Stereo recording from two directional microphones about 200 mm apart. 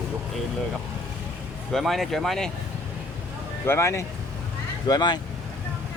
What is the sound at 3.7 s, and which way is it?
Speech, 15° left (ahead or behind).